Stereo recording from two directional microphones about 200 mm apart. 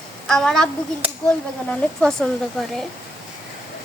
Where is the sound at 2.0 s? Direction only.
5° left (ahead or behind).